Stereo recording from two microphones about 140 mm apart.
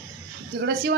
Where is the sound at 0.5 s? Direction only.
90° right.